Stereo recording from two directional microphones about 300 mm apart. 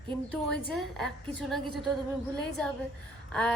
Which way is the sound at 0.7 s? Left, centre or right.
Centre.